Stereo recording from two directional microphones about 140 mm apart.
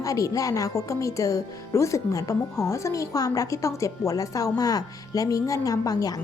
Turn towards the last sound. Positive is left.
turn(degrees=25)  # may be behind; listen again after turning